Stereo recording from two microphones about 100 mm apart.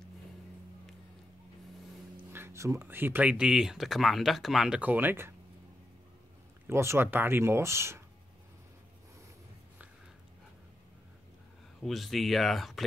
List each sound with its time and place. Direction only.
2.3 s speech: 25° right (ahead or behind); by 4.7 s centre (ahead or behind)
4.7 s speech: 15° right (ahead or behind)
6.7 s speech: 25° right (ahead or behind)
11.8 s speech: centre (ahead or behind)